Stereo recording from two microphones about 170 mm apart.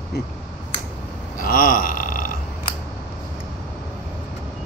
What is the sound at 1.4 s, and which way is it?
Burping, 55° left (ahead or behind).